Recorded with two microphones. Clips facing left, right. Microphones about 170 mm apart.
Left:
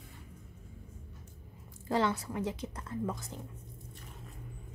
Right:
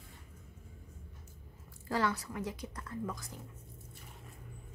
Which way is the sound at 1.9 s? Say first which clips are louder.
Left 3 dB; 25° left (ahead or behind).